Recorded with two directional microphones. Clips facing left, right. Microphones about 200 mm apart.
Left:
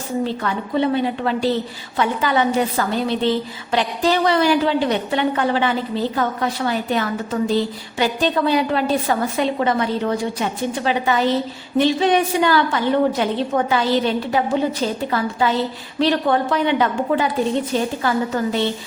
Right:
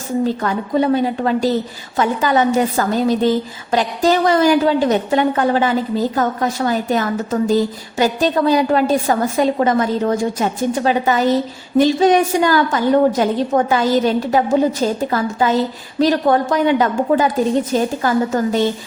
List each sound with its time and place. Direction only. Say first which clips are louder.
0.3 s a woman's voice: right 4 dB; 40° right (ahead or behind)